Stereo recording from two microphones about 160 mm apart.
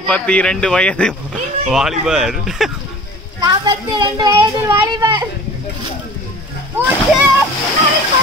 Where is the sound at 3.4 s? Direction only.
25° right (ahead or behind).